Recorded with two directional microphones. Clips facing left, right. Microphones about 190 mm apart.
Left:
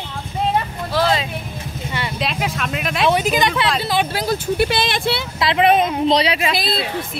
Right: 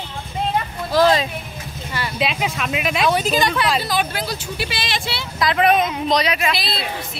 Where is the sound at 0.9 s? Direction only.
40° right (ahead or behind).